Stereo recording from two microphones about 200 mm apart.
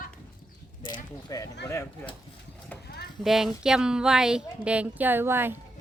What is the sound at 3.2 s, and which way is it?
Speech, centre (ahead or behind).